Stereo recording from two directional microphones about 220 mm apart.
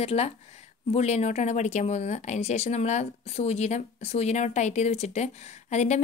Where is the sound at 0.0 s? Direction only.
30° left (ahead or behind).